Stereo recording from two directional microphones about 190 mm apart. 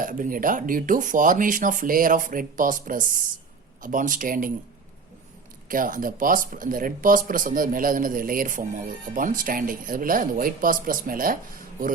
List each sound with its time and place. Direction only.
0.0 s speech: 45° right (ahead or behind)
5.6 s speech: 45° right (ahead or behind)